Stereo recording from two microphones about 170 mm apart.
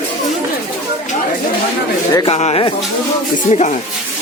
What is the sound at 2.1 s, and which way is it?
Speech, 25° left (ahead or behind).